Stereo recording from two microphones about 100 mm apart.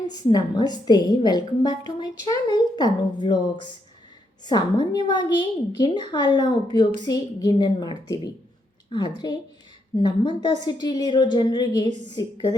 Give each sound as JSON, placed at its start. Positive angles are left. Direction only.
{"t": 0.1, "sound": "a woman's voice", "side_deg": 45}